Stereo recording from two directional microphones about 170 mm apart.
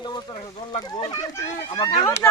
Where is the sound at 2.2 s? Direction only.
10° left (ahead or behind).